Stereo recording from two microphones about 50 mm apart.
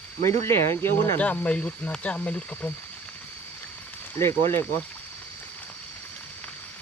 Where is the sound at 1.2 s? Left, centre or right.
Left.